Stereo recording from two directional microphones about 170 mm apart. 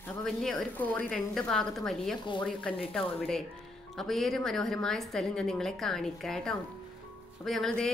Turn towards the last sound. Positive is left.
turn(degrees=0)  # may be behind; listen again after turning